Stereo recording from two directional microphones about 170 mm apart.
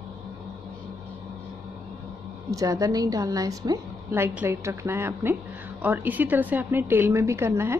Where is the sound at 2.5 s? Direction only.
20° right (ahead or behind).